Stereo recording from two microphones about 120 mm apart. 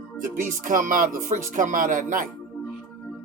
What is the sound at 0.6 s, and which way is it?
Speech, 90° right.